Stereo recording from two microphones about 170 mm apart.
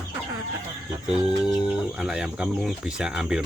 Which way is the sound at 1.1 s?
5° right (ahead or behind).